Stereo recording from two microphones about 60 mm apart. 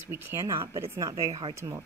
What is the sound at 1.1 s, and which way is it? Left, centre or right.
Speech, right.